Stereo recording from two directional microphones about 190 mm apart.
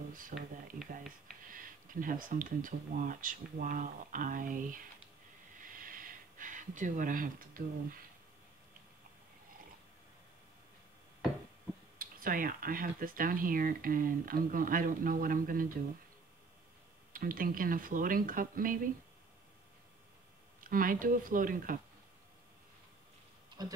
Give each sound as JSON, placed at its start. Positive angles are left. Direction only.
{"t": 0.3, "sound": "speech", "side_deg": -45}
{"t": 1.5, "sound": "speech", "side_deg": -45}
{"t": 5.6, "sound": "gasp", "side_deg": -45}
{"t": 12.0, "sound": "speech", "side_deg": -45}
{"t": 17.1, "sound": "speech", "side_deg": -45}
{"t": 20.6, "sound": "speech", "side_deg": -45}
{"t": 23.6, "sound": "speech", "side_deg": -20}